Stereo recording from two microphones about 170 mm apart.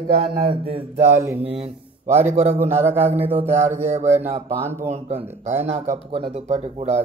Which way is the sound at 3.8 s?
40° right (ahead or behind).